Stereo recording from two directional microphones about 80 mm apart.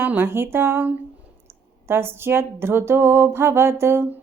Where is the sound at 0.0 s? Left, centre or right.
Right.